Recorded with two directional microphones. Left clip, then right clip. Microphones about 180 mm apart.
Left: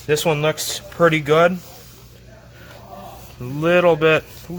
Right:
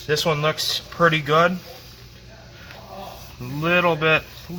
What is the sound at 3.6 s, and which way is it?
Speech, 40° left (ahead or behind).